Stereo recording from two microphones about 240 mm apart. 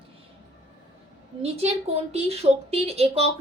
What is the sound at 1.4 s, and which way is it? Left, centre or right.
A woman's voice, right.